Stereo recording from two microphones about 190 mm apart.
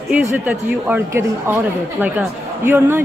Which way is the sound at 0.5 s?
10° right (ahead or behind).